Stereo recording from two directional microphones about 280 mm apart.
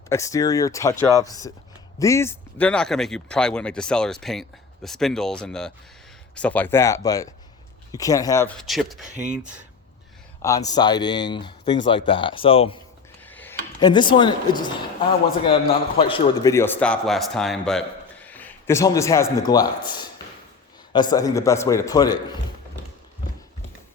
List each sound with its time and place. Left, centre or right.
0.1 s a man's voice: centre
10.4 s a man's voice: centre
13.2 s a man's voice: centre